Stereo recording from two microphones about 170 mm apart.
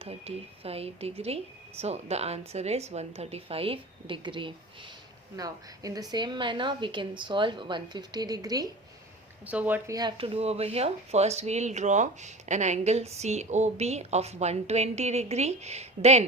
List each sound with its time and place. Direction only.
0.0 s a woman's voice: 35° right (ahead or behind)
9.5 s speech: 10° right (ahead or behind)
9.9 s speech: 25° right (ahead or behind)